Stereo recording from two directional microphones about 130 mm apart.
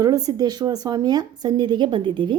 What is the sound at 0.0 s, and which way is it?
A woman's voice, 30° right (ahead or behind).